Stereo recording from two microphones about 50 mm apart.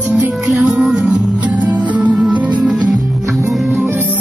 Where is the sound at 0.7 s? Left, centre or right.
Centre.